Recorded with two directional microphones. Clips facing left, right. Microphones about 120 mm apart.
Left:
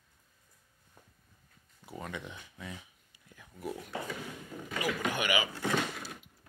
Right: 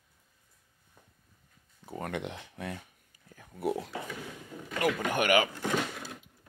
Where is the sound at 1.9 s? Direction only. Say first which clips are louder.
Right 6 dB; 60° right (ahead or behind).